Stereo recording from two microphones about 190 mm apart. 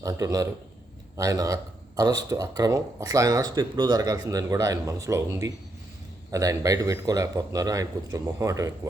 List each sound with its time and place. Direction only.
0.0 s a man's voice: 20° right (ahead or behind)